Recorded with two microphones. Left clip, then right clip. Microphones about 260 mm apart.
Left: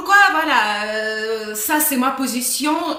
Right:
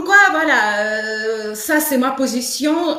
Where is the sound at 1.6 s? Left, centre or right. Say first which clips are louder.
Right 3 dB; left.